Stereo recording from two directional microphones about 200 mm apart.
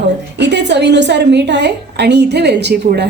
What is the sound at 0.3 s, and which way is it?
A woman's voice, 60° right (ahead or behind).